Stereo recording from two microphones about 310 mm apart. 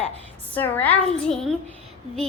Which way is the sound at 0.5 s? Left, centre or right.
Centre.